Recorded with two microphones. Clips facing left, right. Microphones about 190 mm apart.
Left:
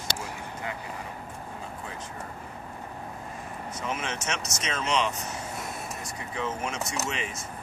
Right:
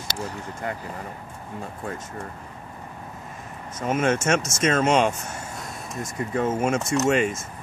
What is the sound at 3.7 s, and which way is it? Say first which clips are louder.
Speech: right 11 dB; 50° right (ahead or behind).